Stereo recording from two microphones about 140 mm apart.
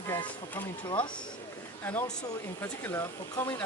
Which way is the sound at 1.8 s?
15° left (ahead or behind).